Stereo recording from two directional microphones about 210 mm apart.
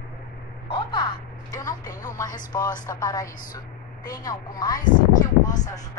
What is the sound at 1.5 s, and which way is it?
A woman's voice, 15° left (ahead or behind).